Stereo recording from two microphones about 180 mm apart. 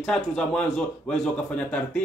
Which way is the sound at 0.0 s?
5° left (ahead or behind).